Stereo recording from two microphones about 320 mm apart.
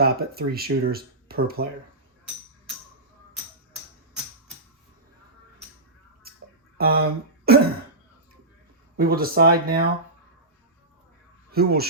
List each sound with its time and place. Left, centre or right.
0.0 s speech: right
6.3 s a sound: right
6.7 s speech: right
9.0 s speech: right
11.5 s speech: right